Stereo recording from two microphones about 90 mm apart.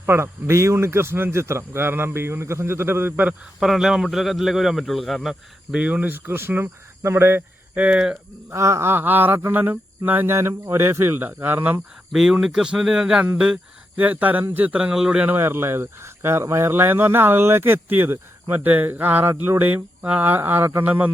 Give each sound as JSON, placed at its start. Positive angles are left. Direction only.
{"t": 0.0, "sound": "speech", "side_deg": -30}
{"t": 3.6, "sound": "speech", "side_deg": -5}
{"t": 7.9, "sound": "speech", "side_deg": -10}
{"t": 8.4, "sound": "speech", "side_deg": -35}
{"t": 12.1, "sound": "speech", "side_deg": -5}
{"t": 15.3, "sound": "speech", "side_deg": -25}